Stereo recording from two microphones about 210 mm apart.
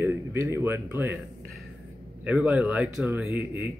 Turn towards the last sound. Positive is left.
turn(degrees=-10)  # may be behind; listen again after turning